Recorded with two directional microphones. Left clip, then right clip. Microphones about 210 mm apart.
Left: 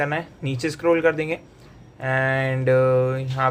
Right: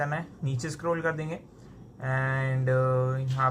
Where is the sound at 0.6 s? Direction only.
25° left (ahead or behind).